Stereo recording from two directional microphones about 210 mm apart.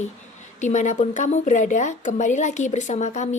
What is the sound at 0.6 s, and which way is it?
Speech, 35° left (ahead or behind).